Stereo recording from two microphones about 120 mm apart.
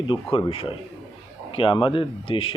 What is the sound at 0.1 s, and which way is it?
Speech, 45° left (ahead or behind).